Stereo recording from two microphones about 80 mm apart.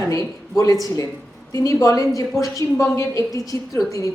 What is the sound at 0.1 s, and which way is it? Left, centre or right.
A woman's voice, left.